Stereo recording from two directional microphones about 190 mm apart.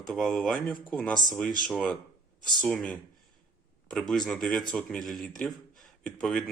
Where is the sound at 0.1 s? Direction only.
Centre (ahead or behind).